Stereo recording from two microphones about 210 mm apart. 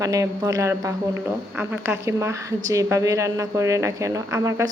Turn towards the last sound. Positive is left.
turn(degrees=-15)  # may be behind; listen again after turning